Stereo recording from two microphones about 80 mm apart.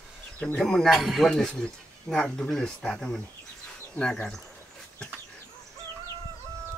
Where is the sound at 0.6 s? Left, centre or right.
Centre.